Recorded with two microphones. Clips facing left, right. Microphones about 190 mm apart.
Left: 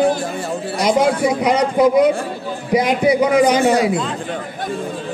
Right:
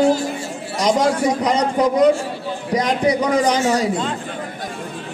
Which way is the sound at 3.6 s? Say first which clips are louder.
Left 4 dB; 60° left (ahead or behind).